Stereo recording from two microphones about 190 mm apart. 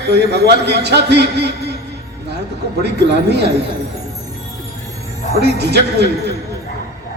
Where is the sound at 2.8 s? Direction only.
60° right (ahead or behind).